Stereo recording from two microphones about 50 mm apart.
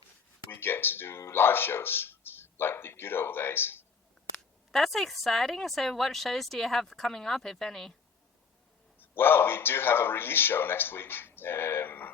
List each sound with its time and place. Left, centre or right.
0.5 s speech: left
4.7 s speech: centre
9.0 s a man's voice: left